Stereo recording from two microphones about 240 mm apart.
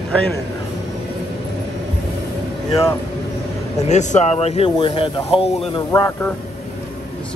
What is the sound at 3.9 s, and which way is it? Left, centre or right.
Speech, left.